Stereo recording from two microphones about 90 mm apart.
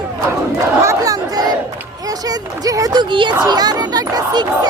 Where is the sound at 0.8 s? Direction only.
35° right (ahead or behind).